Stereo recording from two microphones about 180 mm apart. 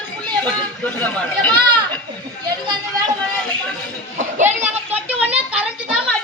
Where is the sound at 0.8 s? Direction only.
10° left (ahead or behind).